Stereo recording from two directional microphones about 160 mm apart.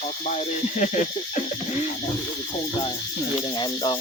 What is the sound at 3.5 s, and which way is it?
Speech, 25° left (ahead or behind).